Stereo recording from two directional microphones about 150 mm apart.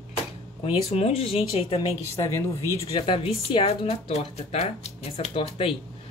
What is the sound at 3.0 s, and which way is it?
Speech, 35° left (ahead or behind).